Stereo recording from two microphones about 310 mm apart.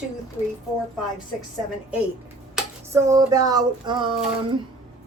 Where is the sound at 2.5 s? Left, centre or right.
Centre.